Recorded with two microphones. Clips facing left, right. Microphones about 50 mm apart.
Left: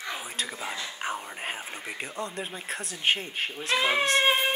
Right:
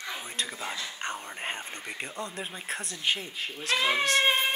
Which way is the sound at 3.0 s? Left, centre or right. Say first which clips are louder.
Left 4 dB; left.